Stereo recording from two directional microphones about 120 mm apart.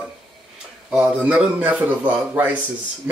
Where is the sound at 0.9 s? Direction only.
10° right (ahead or behind).